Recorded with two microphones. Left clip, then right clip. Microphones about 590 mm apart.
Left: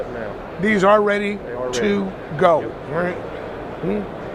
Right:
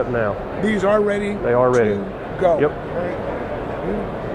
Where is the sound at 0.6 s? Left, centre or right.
Left.